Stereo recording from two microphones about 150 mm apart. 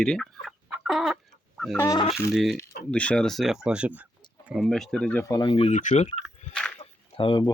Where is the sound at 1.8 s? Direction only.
20° left (ahead or behind).